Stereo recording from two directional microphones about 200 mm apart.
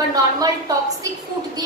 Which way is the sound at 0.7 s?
20° right (ahead or behind).